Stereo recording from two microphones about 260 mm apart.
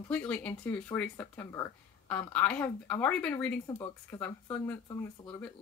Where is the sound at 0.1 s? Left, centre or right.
Centre.